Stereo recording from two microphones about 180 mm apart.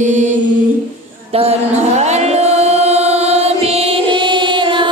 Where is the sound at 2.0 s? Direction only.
40° right (ahead or behind).